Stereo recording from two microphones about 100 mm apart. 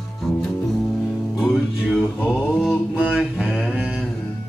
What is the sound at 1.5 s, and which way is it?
Music, centre (ahead or behind).